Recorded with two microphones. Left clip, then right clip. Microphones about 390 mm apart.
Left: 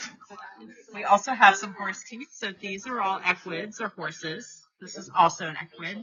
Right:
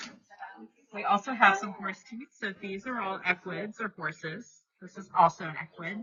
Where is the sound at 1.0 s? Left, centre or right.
Centre.